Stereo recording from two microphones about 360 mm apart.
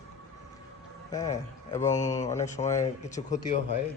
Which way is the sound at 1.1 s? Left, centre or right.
Centre.